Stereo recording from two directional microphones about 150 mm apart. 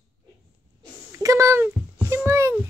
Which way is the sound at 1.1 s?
20° right (ahead or behind).